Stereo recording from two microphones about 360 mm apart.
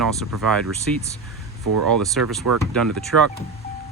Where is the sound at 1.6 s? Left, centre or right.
Right.